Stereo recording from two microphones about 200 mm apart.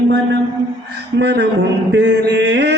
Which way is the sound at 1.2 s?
55° right (ahead or behind).